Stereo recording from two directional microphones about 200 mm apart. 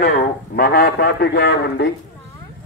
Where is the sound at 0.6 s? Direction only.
50° left (ahead or behind).